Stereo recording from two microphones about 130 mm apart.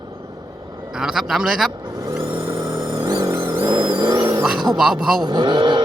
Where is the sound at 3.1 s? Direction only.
25° right (ahead or behind).